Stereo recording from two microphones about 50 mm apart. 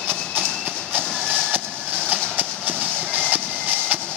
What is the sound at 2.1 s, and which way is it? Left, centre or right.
Train, right.